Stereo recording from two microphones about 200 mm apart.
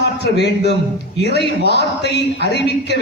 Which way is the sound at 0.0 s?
55° left (ahead or behind).